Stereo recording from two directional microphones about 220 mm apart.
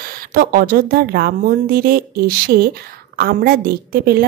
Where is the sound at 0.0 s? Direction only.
40° right (ahead or behind).